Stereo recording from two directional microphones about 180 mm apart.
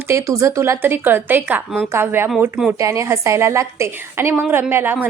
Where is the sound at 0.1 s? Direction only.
15° right (ahead or behind).